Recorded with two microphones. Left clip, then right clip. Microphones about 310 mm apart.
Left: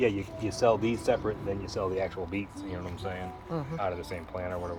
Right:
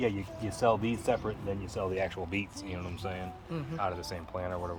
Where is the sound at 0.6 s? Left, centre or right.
Right.